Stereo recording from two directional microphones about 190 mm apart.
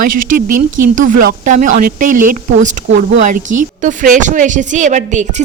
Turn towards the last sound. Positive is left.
turn(degrees=-40)  # may be behind; listen again after turning